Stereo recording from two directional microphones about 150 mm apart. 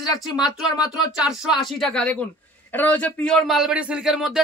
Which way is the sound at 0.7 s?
25° left (ahead or behind).